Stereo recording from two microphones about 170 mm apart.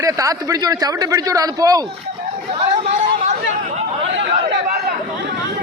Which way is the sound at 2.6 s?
35° right (ahead or behind).